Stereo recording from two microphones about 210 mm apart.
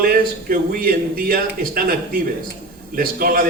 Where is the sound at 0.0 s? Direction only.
45° right (ahead or behind).